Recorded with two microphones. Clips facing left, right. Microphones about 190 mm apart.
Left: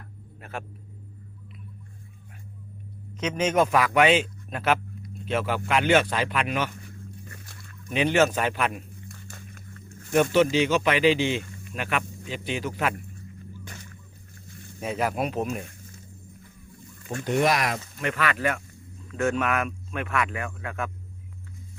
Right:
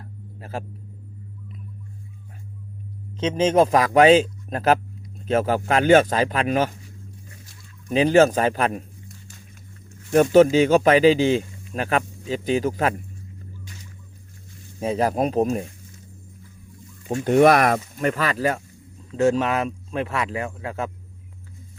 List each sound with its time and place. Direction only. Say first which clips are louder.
0.0 s a sound: right 5 dB; 30° right (ahead or behind)
3.2 s a man's voice: right 5 dB; 30° right (ahead or behind)
6.8 s a sound: left 2 dB; 60° left (ahead or behind)
7.9 s a man's voice: right 6 dB; 35° right (ahead or behind)
9.0 s dog: left 2 dB; 60° left (ahead or behind)
10.1 s a man's voice: right 6 dB; 40° right (ahead or behind)
13.7 s a sound: left 1 dB; 55° left (ahead or behind)
14.8 s a man's voice: right 6 dB; 35° right (ahead or behind)
17.2 s a man's voice: right 8 dB; 55° right (ahead or behind); by 20.9 s 30° right (ahead or behind)